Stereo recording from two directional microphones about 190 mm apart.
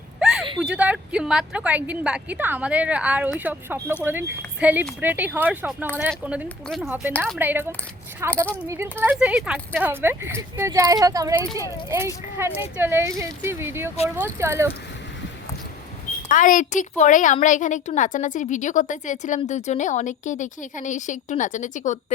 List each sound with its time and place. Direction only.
0.2 s a sound: centre (ahead or behind)
0.6 s a woman's voice: 5° right (ahead or behind)
16.3 s a woman's voice: 40° left (ahead or behind)